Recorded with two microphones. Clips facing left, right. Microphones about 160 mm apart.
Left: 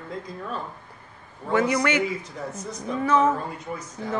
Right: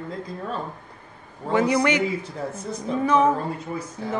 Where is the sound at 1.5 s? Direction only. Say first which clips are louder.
Right 2 dB; 25° right (ahead or behind).